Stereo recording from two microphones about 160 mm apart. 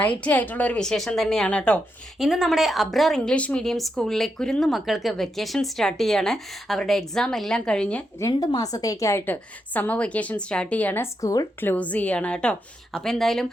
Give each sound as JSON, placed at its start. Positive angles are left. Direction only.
{"t": 0.2, "sound": "a woman's voice", "side_deg": 10}
{"t": 8.2, "sound": "a woman's voice", "side_deg": 25}